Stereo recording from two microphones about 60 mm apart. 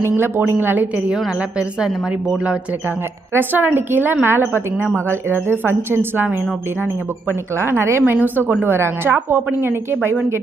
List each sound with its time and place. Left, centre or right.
0.2 s a woman's voice: right
1.4 s a woman's voice: centre
3.3 s a woman's voice: right
7.5 s a woman's voice: right
8.1 s a woman's voice: right